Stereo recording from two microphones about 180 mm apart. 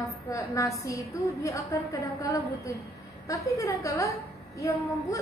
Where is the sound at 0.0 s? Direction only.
15° left (ahead or behind).